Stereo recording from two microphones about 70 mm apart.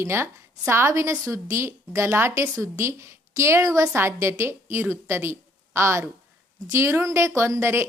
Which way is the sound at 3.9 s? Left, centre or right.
Right.